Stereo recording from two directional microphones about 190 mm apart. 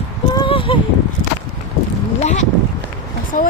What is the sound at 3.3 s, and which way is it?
Speech, 40° left (ahead or behind).